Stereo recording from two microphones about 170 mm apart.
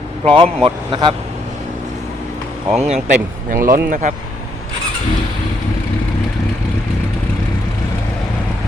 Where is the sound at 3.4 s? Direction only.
55° right (ahead or behind).